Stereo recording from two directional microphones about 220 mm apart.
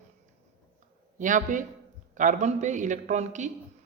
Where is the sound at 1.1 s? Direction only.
35° right (ahead or behind).